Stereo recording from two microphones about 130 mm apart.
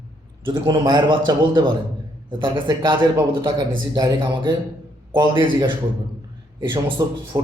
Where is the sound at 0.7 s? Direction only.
35° right (ahead or behind).